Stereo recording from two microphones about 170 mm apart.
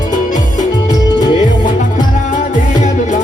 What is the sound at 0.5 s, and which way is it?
Music, 25° left (ahead or behind).